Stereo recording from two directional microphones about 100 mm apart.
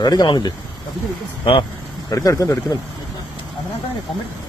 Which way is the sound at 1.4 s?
55° left (ahead or behind).